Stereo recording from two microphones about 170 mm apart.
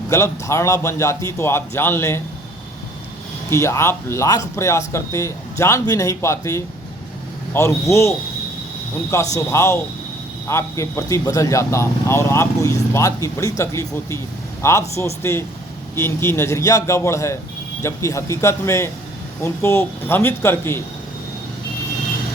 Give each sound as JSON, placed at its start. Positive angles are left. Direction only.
{"t": 0.1, "sound": "speech", "side_deg": 15}
{"t": 3.5, "sound": "speech", "side_deg": 15}
{"t": 9.3, "sound": "speech", "side_deg": 15}